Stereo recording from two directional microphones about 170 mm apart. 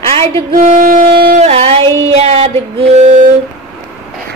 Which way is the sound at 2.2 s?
35° right (ahead or behind).